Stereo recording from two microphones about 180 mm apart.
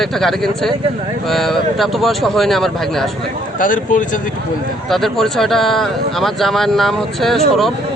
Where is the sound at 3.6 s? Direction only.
45° left (ahead or behind).